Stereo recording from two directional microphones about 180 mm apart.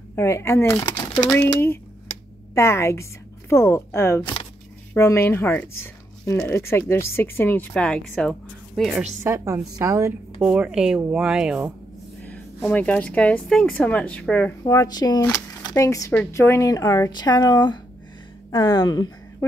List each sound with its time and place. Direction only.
0.1 s a woman's voice: 15° left (ahead or behind)
9.2 s a woman's voice: 15° right (ahead or behind)
10.4 s speech: 5° right (ahead or behind)
12.6 s speech: 10° left (ahead or behind)
14.6 s speech: 20° left (ahead or behind)